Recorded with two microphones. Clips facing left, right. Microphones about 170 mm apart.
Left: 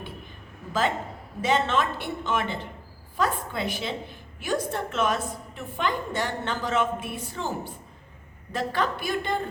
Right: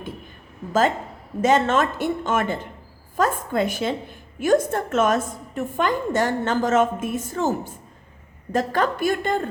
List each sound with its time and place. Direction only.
1.4 s a woman's voice: 45° right (ahead or behind)